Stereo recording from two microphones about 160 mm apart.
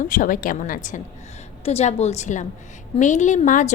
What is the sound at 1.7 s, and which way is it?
A woman's voice, 40° left (ahead or behind).